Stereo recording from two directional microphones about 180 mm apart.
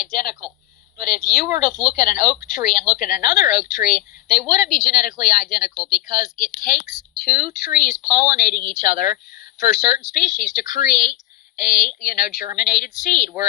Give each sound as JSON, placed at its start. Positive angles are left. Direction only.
{"t": 0.0, "sound": "a woman's voice", "side_deg": 50}